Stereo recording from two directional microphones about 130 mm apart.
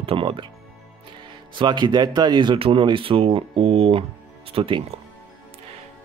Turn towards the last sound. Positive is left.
turn(degrees=-45)  # may be behind; listen again after turning